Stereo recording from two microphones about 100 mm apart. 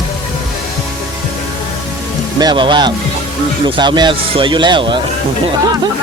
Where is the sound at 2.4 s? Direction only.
50° right (ahead or behind).